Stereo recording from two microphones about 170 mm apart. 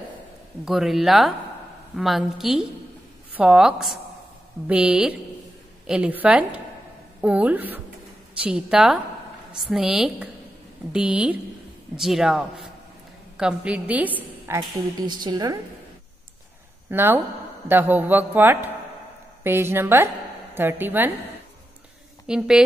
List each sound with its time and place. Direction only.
0.7 s a woman's voice: centre (ahead or behind)
14.7 s a woman's voice: 25° right (ahead or behind)
16.9 s a man's voice: 15° right (ahead or behind)
22.2 s a woman's voice: 5° right (ahead or behind)